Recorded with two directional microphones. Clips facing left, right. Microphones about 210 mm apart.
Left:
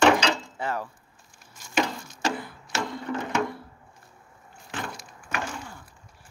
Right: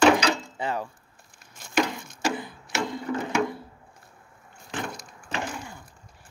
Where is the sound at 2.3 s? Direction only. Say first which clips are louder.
Right 1 dB; 20° right (ahead or behind).